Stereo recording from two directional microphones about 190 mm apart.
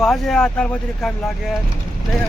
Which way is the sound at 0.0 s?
Centre (ahead or behind).